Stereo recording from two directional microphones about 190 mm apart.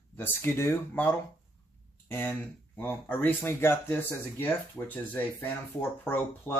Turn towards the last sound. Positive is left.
turn(degrees=10)  # may be behind; listen again after turning